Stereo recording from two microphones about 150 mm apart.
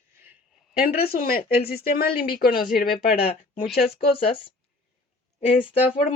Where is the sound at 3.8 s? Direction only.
40° left (ahead or behind).